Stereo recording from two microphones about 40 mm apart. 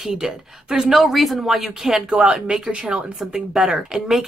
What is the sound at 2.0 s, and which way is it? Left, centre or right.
Speech, right.